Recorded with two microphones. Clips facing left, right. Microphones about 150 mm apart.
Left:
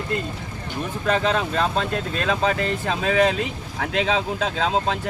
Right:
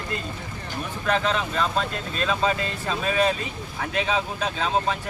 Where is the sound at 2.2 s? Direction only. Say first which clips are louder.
Left 1 dB; 65° left (ahead or behind).